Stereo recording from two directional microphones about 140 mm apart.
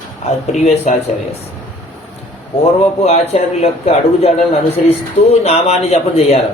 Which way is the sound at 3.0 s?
50° left (ahead or behind).